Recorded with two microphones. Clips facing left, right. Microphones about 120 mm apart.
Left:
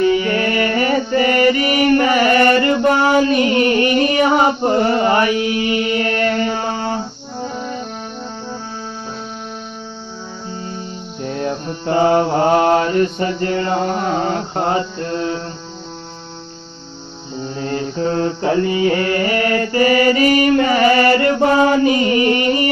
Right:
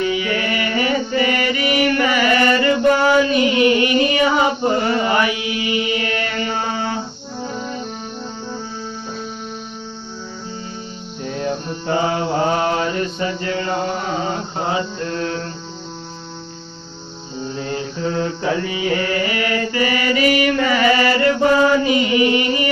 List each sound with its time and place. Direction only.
0.0 s mantra: 40° left (ahead or behind)
11.2 s mantra: 45° left (ahead or behind)
15.1 s music: 20° left (ahead or behind)
17.6 s mantra: 40° left (ahead or behind)